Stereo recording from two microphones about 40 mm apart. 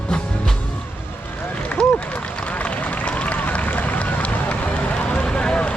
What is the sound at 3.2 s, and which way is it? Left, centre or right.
Run, left.